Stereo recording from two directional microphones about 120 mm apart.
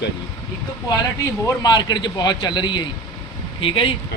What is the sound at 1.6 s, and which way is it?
A man's voice, 35° left (ahead or behind).